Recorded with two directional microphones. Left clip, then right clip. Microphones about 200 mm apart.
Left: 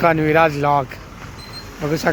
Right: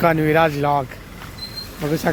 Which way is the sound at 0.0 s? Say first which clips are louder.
Left 2 dB; 15° right (ahead or behind).